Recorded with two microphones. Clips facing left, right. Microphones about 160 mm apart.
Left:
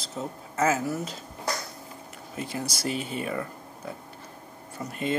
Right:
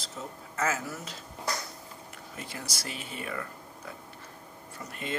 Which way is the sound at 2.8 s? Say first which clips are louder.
Left 10 dB; 25° left (ahead or behind).